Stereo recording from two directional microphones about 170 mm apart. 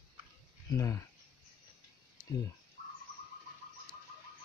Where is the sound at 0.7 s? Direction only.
15° left (ahead or behind).